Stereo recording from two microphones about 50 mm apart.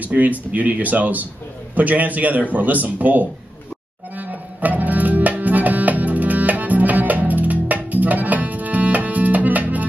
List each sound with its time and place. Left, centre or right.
0.0 s speech: right
4.2 s music: right